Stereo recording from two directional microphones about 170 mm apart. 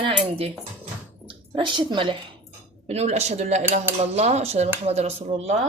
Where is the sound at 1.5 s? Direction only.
25° right (ahead or behind).